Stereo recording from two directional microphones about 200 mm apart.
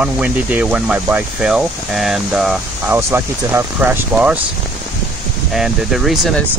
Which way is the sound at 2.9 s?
15° right (ahead or behind).